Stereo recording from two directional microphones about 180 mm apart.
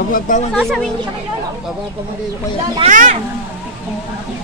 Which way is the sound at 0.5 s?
Centre (ahead or behind).